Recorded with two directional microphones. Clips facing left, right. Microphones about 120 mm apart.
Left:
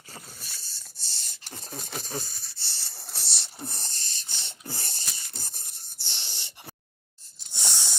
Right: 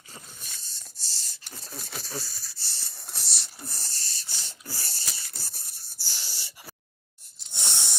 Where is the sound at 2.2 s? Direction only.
25° left (ahead or behind).